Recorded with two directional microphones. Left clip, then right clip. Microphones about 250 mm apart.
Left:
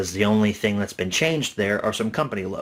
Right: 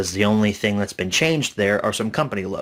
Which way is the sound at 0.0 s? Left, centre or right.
Right.